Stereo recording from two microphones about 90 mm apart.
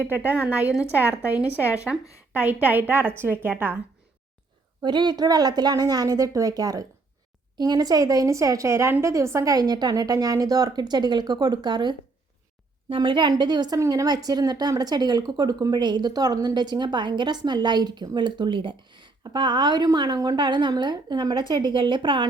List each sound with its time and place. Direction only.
0.0 s a woman's voice: 20° right (ahead or behind)
4.8 s a woman's voice: 55° right (ahead or behind)
13.7 s a woman's voice: 40° right (ahead or behind); by 22.3 s 65° right (ahead or behind)